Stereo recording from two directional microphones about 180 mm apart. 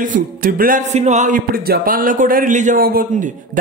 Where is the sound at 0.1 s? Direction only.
50° right (ahead or behind).